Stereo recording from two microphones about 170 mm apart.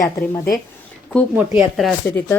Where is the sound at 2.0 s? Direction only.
10° left (ahead or behind).